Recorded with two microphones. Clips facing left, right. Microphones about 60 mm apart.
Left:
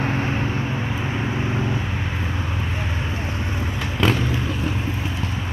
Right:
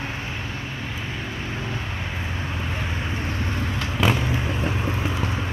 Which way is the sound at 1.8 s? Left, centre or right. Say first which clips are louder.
Left 4 dB; centre.